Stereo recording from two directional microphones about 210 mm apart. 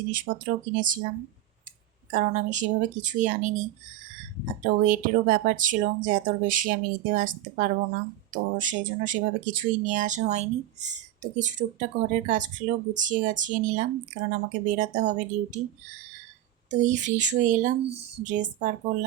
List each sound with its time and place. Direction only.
0.1 s speech: 40° right (ahead or behind)
2.0 s speech: 40° right (ahead or behind)
4.6 s speech: 40° right (ahead or behind)
16.6 s speech: 35° right (ahead or behind)